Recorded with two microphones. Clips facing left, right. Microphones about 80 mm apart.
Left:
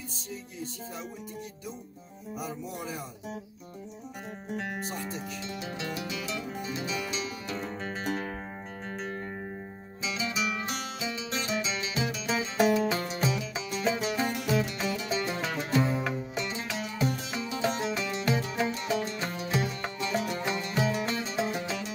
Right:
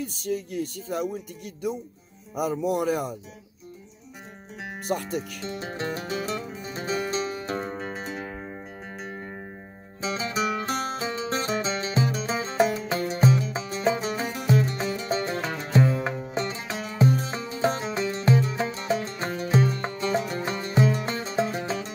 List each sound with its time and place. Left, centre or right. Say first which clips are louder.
0.0 s music: right 12 dB; right
2.3 s music: right 12 dB; right
4.8 s music: right 7 dB; right
5.4 s music: right 4 dB; right
10.0 s music: right 5 dB; right